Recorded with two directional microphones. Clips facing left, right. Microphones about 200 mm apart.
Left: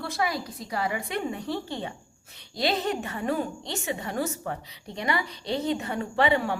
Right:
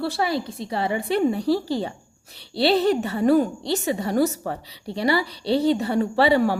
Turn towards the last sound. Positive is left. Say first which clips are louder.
# right 6 dB
turn(degrees=-35)  # may be behind; listen again after turning